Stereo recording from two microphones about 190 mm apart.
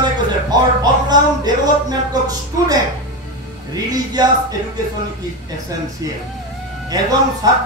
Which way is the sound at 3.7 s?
20° right (ahead or behind).